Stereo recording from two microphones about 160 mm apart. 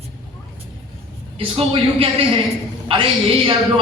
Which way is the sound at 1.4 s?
35° right (ahead or behind).